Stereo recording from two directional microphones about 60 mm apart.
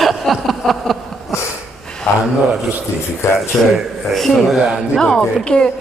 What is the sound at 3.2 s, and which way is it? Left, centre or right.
Speech, left.